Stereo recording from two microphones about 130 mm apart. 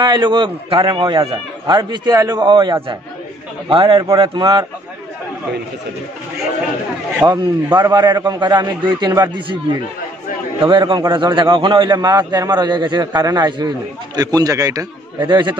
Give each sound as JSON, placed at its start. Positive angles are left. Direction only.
{"t": 0.0, "sound": "a man's voice", "side_deg": -35}
{"t": 7.2, "sound": "a man's voice", "side_deg": -35}
{"t": 10.6, "sound": "a man's voice", "side_deg": -35}